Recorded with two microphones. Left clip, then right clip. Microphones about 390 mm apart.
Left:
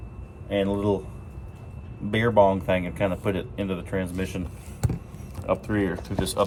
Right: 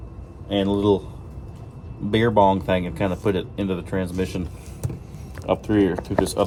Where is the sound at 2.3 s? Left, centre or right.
Centre.